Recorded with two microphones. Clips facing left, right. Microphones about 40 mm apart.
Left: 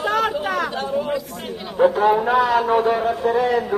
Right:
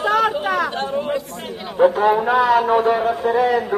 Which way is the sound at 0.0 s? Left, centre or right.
Right.